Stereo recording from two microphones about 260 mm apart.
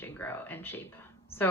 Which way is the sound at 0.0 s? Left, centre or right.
Centre.